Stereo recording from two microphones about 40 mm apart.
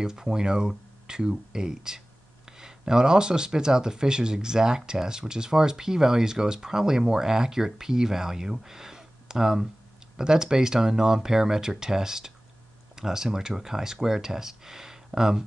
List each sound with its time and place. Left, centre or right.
0.0 s speech: centre